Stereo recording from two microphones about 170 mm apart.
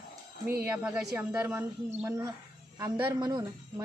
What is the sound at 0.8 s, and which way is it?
A woman's voice, 10° right (ahead or behind).